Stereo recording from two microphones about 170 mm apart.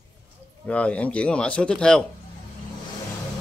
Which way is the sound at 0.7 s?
5° left (ahead or behind).